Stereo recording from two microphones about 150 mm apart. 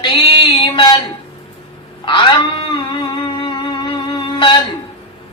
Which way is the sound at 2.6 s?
35° left (ahead or behind).